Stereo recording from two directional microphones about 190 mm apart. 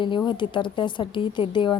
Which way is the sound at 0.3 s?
25° left (ahead or behind).